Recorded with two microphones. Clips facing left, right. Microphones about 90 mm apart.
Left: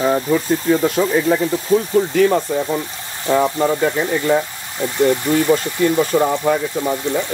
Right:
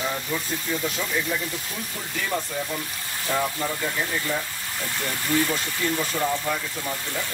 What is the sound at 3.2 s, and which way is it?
Speech, 90° left.